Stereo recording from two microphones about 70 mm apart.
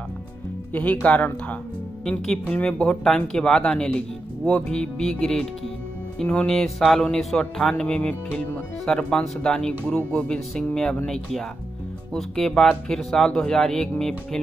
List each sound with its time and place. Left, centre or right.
1.0 s speech: left
2.0 s speech: centre
12.1 s speech: centre